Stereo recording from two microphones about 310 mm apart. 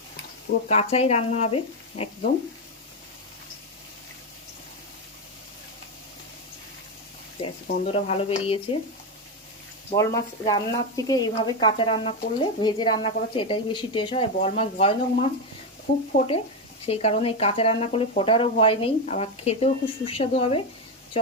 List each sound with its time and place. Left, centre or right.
0.7 s speech: centre
7.9 s speech: centre
9.9 s speech: centre